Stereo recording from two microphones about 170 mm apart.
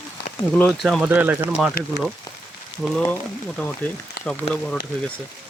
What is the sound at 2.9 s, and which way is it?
Speech, 5° left (ahead or behind).